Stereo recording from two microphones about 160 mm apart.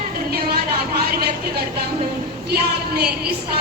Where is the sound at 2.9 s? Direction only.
85° right.